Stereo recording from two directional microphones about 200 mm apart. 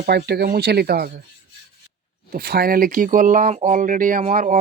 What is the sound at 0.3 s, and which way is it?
Speech, 50° right (ahead or behind).